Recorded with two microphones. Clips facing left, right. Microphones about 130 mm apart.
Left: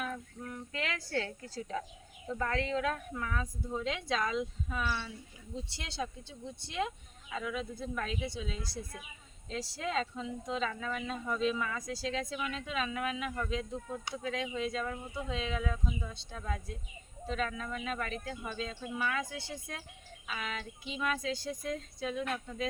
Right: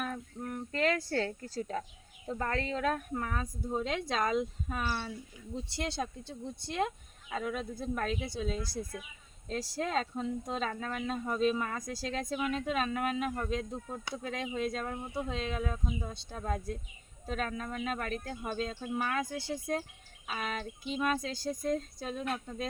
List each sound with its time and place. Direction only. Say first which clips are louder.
0.0 s speech: right 2 dB; 50° right (ahead or behind)